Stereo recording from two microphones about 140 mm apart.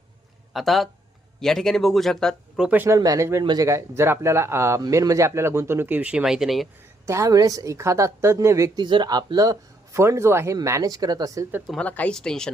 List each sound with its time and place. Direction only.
0.5 s speech: centre (ahead or behind)
2.6 s a woman's voice: 15° right (ahead or behind)
7.0 s a woman's voice: 20° right (ahead or behind)
11.7 s speech: 10° left (ahead or behind)